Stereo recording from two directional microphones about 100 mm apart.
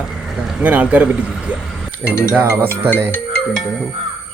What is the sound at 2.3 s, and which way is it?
Speech, 25° right (ahead or behind).